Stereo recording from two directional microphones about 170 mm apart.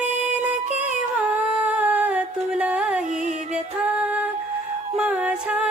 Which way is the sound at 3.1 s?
45° right (ahead or behind).